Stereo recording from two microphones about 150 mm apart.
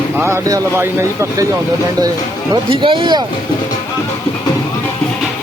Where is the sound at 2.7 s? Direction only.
35° right (ahead or behind).